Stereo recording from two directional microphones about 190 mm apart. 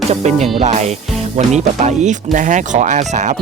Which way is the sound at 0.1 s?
35° right (ahead or behind).